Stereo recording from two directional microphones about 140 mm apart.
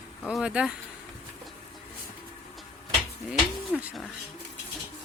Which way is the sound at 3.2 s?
5° right (ahead or behind).